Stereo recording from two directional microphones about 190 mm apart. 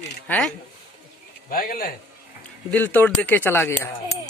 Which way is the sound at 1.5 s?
50° left (ahead or behind).